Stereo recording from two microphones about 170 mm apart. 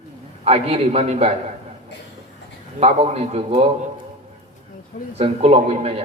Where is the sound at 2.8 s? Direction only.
35° right (ahead or behind).